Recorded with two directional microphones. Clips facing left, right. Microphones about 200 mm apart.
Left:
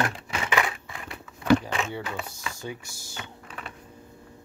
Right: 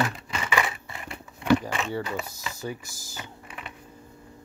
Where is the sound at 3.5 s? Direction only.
5° right (ahead or behind).